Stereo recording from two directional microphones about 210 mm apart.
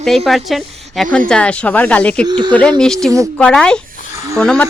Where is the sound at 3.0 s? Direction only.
5° left (ahead or behind).